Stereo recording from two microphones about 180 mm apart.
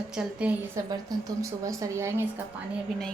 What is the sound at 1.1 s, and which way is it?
Speech, 20° right (ahead or behind).